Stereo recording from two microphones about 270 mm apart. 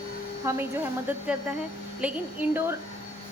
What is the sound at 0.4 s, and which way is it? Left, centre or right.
A woman's voice, centre.